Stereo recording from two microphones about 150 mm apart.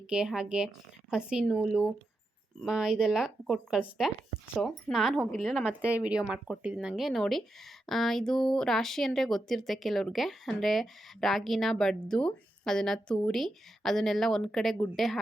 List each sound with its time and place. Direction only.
0.1 s speech: 5° right (ahead or behind)